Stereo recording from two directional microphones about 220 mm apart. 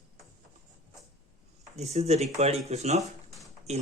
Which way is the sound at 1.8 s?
30° right (ahead or behind).